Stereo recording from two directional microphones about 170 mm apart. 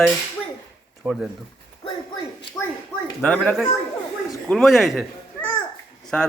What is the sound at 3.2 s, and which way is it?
A man's voice, 5° left (ahead or behind).